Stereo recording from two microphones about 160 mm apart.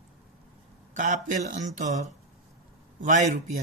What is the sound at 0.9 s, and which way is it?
Speech, 50° right (ahead or behind).